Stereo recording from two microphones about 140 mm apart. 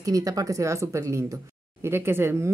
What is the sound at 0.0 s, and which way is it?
Speech, 25° right (ahead or behind).